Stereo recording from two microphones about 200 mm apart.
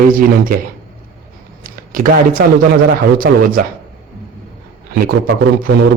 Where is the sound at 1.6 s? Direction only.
45° right (ahead or behind).